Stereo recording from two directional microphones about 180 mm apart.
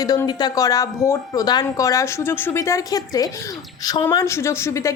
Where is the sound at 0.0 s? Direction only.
20° left (ahead or behind).